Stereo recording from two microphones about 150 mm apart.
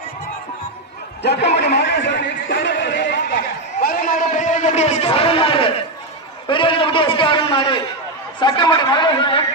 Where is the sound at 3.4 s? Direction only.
80° left; by 5.8 s 40° left (ahead or behind).